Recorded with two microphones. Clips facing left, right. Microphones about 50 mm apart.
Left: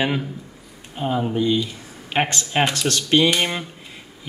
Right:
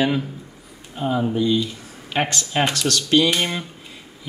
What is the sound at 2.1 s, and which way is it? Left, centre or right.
Speech, left.